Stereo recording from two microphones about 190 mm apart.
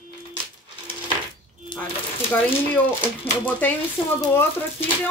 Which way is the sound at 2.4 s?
10° left (ahead or behind).